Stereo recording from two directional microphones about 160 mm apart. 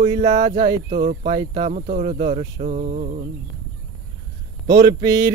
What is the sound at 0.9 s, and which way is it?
Speech, 65° right (ahead or behind).